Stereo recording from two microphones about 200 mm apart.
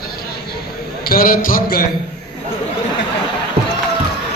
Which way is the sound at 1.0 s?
45° left (ahead or behind).